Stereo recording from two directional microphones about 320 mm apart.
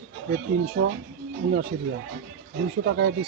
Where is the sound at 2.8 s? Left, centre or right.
Right.